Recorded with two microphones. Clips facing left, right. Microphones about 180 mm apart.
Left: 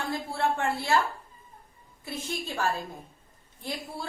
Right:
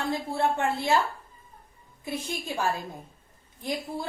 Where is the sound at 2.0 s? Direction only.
15° right (ahead or behind).